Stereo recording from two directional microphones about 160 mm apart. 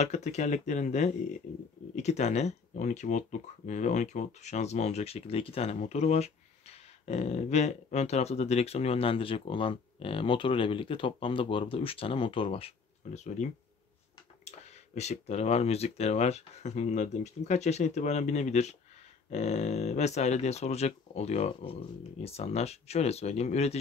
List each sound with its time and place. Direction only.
0.0 s speech: 45° left (ahead or behind)
15.0 s speech: 45° left (ahead or behind)